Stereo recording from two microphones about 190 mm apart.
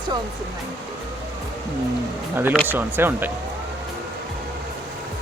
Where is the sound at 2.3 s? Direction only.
10° right (ahead or behind).